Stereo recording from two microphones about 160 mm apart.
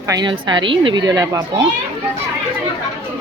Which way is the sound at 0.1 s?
25° right (ahead or behind).